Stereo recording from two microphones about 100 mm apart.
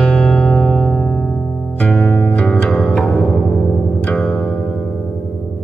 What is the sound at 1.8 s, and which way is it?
Music, 10° left (ahead or behind).